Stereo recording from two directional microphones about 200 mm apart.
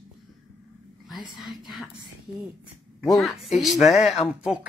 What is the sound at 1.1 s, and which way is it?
Speech, 25° left (ahead or behind).